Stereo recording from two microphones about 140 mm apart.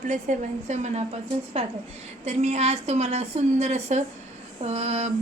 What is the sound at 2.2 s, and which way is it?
A woman's voice, 55° right (ahead or behind).